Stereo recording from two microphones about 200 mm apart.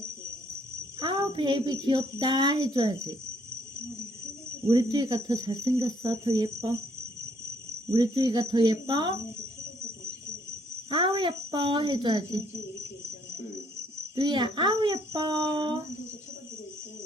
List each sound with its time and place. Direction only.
0.9 s speech: 25° right (ahead or behind)
4.7 s speech: 20° right (ahead or behind)
7.9 s speech: 20° right (ahead or behind)
10.8 s speech: 25° right (ahead or behind)
14.2 s speech: 20° right (ahead or behind)